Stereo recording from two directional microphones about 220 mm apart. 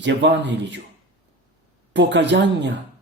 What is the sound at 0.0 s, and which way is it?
Speech, 50° right (ahead or behind).